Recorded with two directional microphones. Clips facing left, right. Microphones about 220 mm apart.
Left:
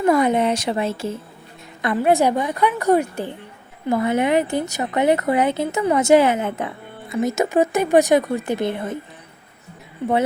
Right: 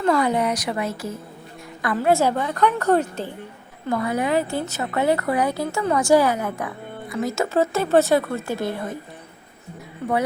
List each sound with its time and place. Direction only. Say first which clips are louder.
0.0 s a woman's voice: left 3 dB; 20° left (ahead or behind)
3.8 s speech: left 4 dB; 20° left (ahead or behind)